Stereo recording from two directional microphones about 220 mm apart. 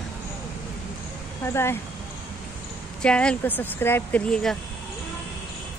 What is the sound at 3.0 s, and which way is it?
Speech, 5° left (ahead or behind).